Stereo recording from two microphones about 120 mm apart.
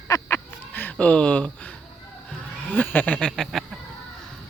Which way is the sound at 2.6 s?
15° left (ahead or behind).